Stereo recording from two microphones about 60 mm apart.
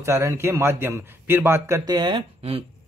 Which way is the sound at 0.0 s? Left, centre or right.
Right.